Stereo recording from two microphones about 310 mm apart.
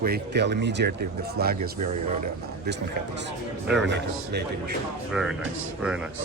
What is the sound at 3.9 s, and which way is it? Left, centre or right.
Speech, right.